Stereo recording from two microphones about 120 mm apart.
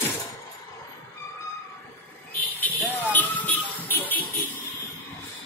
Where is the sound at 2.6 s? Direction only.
15° left (ahead or behind).